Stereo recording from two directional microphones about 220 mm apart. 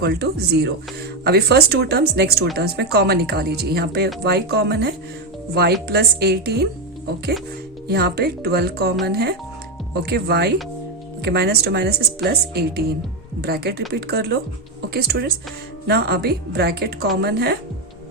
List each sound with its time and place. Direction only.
0.0 s speech: 45° right (ahead or behind)
7.9 s speech: 45° right (ahead or behind)